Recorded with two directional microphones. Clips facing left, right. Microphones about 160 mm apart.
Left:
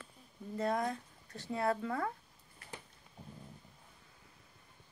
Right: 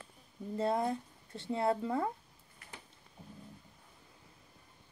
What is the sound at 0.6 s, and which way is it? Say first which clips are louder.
Speech: right 2 dB; 25° right (ahead or behind).